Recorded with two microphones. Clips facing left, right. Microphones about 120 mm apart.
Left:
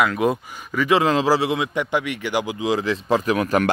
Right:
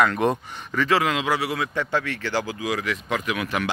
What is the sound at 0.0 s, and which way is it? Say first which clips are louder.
Speech: left 1 dB; 5° left (ahead or behind).